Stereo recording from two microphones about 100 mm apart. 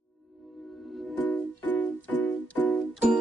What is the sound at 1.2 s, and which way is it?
Music, 15° left (ahead or behind).